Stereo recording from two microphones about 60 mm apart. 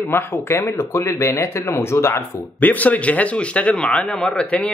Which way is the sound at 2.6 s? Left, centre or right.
Left.